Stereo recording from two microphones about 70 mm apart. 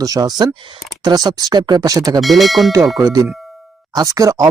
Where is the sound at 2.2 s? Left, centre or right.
Centre.